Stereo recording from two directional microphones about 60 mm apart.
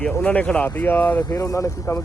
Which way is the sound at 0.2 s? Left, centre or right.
Left.